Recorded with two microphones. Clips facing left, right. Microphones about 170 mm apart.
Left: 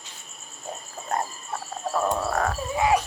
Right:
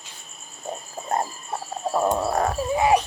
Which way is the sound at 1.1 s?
25° right (ahead or behind).